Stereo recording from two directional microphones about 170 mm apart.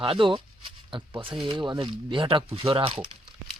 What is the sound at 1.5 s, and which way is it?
Speech, 25° right (ahead or behind).